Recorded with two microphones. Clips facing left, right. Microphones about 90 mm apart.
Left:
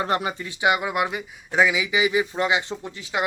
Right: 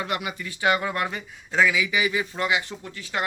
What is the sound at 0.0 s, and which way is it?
Speech, 35° left (ahead or behind).